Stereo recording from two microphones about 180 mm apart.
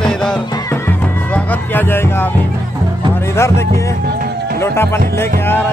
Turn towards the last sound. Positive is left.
turn(degrees=15)  # may be behind; listen again after turning